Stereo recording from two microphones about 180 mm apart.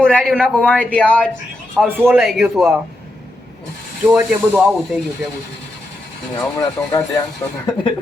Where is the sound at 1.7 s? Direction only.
10° right (ahead or behind).